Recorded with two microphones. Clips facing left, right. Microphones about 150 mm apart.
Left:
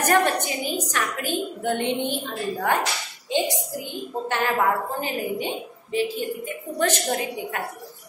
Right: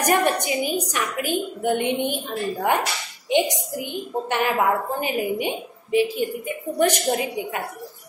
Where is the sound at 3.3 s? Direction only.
15° right (ahead or behind).